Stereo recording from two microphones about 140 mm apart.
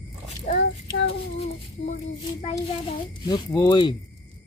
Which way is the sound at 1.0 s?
50° left (ahead or behind).